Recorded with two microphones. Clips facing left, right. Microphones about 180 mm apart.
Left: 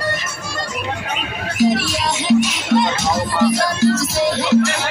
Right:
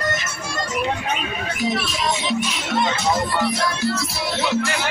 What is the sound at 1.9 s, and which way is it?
Music, 85° left.